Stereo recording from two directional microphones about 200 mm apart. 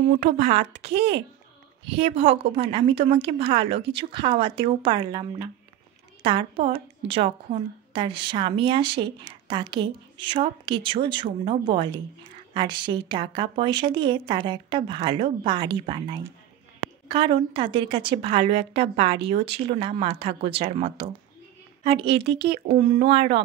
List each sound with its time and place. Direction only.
0.2 s speech: 35° right (ahead or behind)
0.9 s speech: 60° right (ahead or behind)
1.9 s a woman's voice: 30° right (ahead or behind)